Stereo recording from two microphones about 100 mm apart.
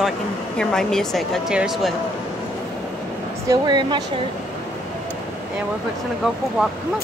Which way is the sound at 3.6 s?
45° right (ahead or behind).